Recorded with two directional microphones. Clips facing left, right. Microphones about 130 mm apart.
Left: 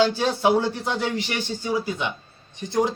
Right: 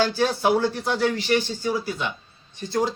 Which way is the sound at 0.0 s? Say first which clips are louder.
Left 1 dB; 20° left (ahead or behind).